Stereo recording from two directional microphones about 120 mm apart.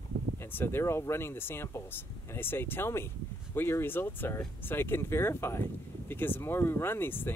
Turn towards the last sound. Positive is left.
turn(degrees=20)  # may be behind; listen again after turning